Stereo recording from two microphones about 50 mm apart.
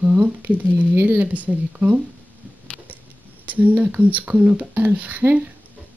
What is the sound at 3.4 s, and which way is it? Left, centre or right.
Speech, right.